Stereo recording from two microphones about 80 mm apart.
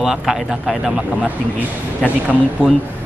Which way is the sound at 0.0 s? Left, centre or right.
Centre.